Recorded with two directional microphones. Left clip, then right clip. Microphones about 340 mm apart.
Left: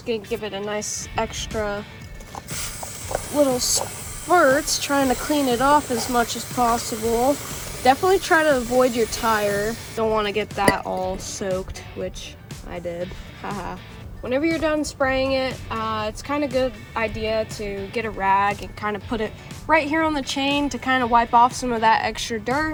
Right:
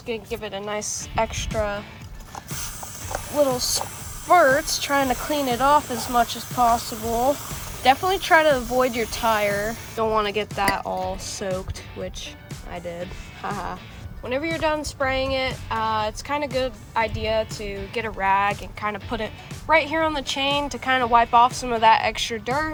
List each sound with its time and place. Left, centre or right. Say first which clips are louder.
0.1 s speech: left 3 dB; right
3.6 s speech: left 2 dB; centre
4.3 s speech: even; right
13.4 s speech: right 1 dB; right